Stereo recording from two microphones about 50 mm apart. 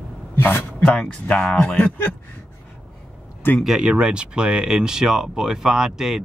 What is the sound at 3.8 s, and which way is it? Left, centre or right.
Speech, centre.